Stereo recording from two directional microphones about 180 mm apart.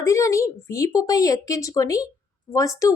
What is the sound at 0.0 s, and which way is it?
A woman's voice, 15° left (ahead or behind).